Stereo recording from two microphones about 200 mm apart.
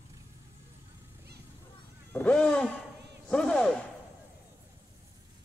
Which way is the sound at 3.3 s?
5° left (ahead or behind).